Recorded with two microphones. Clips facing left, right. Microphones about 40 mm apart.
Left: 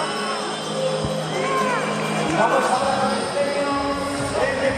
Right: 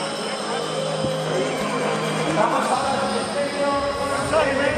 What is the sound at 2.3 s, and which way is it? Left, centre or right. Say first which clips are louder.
Music: left 2 dB; centre.